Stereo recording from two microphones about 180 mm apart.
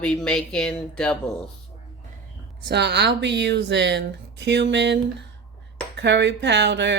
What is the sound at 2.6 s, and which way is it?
A woman's voice, 70° right (ahead or behind).